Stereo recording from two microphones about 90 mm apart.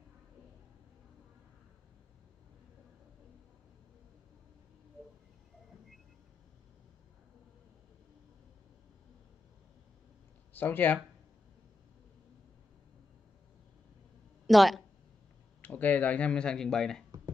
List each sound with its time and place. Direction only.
10.5 s speech: 20° left (ahead or behind)
14.4 s speech: centre (ahead or behind)
15.6 s speech: 15° left (ahead or behind)